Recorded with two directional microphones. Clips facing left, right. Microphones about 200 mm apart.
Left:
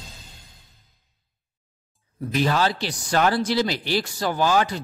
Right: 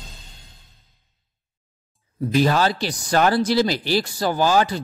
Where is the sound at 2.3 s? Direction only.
40° right (ahead or behind).